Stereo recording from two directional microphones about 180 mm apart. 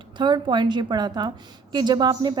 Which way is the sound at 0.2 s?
25° right (ahead or behind).